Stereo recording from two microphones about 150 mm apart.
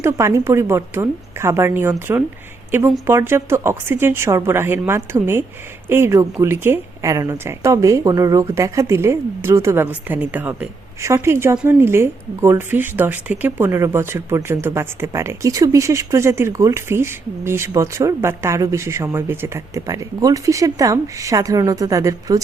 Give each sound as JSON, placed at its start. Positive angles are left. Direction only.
{"t": 0.0, "sound": "a woman's voice", "side_deg": -20}